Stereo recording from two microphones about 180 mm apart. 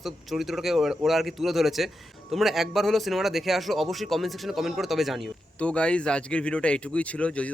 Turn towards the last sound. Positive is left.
turn(degrees=5)  # may be behind; listen again after turning